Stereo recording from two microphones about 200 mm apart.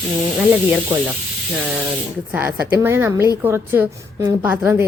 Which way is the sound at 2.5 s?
50° right (ahead or behind).